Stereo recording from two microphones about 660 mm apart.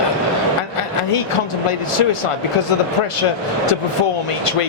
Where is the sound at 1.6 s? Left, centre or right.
Left.